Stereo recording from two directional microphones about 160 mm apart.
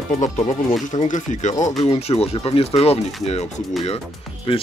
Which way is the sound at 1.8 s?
40° left (ahead or behind).